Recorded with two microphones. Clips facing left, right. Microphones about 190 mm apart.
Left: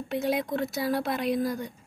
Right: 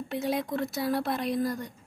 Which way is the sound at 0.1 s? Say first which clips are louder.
Left 2 dB; centre (ahead or behind).